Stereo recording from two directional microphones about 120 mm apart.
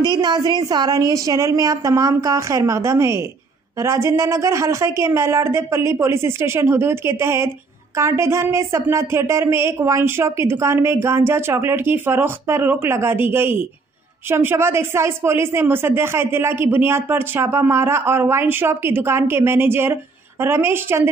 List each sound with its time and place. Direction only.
0.0 s speech: 35° right (ahead or behind); by 21.1 s 20° right (ahead or behind)